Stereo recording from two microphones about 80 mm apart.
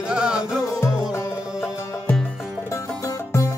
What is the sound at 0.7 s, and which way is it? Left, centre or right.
Music, left.